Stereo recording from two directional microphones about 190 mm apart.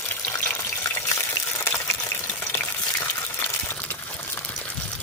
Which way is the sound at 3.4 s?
10° left (ahead or behind).